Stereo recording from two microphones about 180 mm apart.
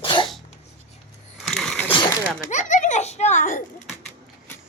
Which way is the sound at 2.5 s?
40° left (ahead or behind).